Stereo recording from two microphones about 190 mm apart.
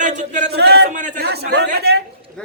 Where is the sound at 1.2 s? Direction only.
60° right (ahead or behind).